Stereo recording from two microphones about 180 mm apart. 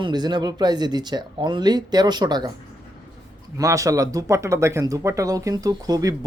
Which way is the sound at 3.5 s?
20° right (ahead or behind).